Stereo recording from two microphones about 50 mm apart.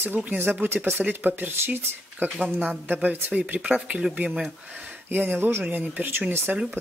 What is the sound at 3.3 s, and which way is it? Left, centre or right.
Speech, right.